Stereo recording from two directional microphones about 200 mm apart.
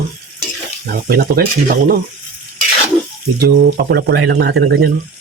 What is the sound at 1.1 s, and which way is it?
Speech, 50° right (ahead or behind).